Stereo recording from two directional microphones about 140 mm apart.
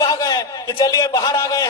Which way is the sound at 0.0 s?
30° left (ahead or behind).